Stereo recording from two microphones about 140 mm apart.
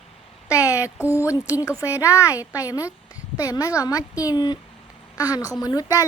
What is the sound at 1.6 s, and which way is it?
Speech, 20° left (ahead or behind).